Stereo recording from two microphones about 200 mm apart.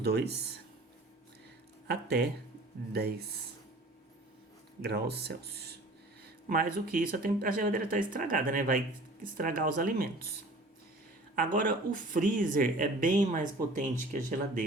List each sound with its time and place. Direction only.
0.0 s speech: 55° right (ahead or behind)
1.9 s speech: 55° right (ahead or behind)
4.8 s speech: 55° right (ahead or behind)
11.3 s speech: 45° right (ahead or behind)